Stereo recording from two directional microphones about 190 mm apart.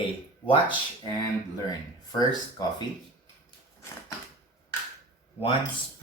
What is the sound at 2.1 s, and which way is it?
Speech, 20° left (ahead or behind).